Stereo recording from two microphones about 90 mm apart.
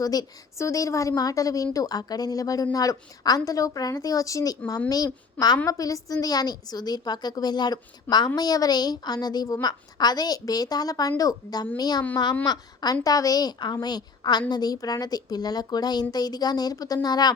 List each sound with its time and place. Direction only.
0.0 s a woman's voice: 45° left (ahead or behind)